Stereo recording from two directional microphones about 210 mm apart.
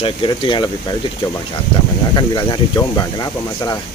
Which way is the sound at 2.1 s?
20° left (ahead or behind).